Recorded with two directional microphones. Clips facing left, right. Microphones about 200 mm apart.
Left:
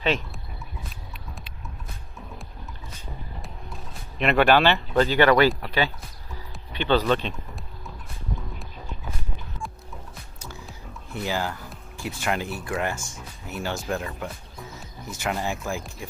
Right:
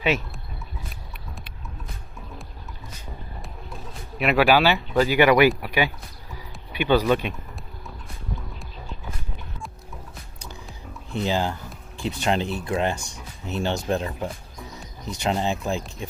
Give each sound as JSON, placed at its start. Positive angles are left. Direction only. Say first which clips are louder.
{"t": 0.0, "sound": "speech", "louder": "right 1 dB", "side_deg": -10}
{"t": 4.2, "sound": "speech", "louder": "even", "side_deg": -5}
{"t": 11.1, "sound": "speech", "louder": "right 4 dB", "side_deg": -20}